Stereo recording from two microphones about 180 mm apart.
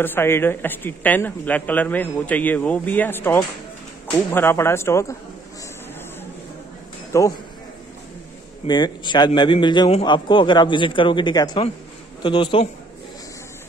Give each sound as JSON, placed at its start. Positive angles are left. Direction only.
{"t": 0.0, "sound": "a woman's voice", "side_deg": 10}
{"t": 7.1, "sound": "a man's voice", "side_deg": 20}
{"t": 8.6, "sound": "a man's voice", "side_deg": 25}